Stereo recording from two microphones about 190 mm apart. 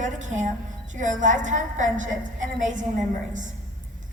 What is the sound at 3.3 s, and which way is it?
Speech, 40° right (ahead or behind).